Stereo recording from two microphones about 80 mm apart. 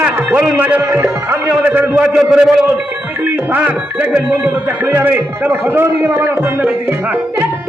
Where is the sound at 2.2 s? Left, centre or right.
Centre.